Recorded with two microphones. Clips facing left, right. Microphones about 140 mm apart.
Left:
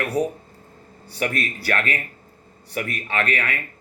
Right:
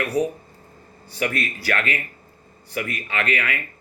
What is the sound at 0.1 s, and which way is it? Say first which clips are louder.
Speech: right 1 dB; 35° left (ahead or behind).